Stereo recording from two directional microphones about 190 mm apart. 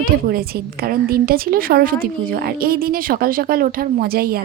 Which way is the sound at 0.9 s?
50° right (ahead or behind).